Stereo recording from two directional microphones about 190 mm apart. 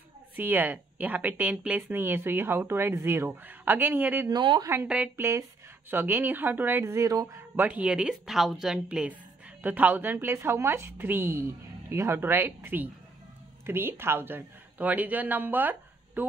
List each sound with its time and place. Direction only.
0.4 s speech: 10° right (ahead or behind)
4.3 s speech: 25° right (ahead or behind)
4.6 s speech: 10° right (ahead or behind)